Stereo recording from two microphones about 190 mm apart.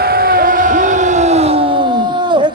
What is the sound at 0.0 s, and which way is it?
Crowd, 50° right (ahead or behind).